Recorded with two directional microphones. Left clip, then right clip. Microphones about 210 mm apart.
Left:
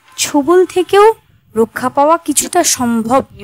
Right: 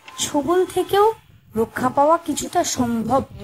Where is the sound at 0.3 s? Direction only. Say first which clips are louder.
Left 9 dB; 45° left (ahead or behind).